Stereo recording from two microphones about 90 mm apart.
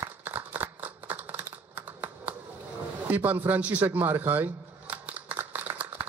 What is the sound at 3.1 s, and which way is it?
Speech, 20° right (ahead or behind).